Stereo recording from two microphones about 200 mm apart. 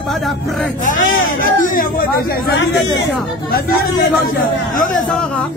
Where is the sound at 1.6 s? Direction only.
45° left (ahead or behind).